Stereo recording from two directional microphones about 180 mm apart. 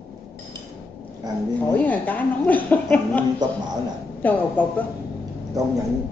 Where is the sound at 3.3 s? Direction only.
25° right (ahead or behind).